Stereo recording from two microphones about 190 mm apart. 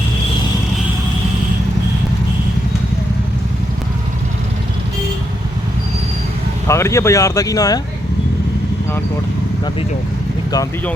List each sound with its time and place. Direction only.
6.7 s speech: 15° left (ahead or behind)